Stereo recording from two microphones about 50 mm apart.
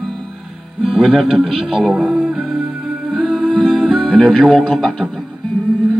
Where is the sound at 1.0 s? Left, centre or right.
Centre.